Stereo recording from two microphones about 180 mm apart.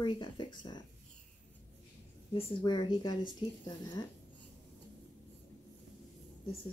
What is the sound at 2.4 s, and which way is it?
A woman's voice, 25° left (ahead or behind).